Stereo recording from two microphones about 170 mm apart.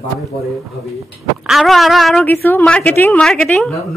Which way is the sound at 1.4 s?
Centre (ahead or behind).